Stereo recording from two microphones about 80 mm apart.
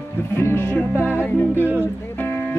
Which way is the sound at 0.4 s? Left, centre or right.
Left.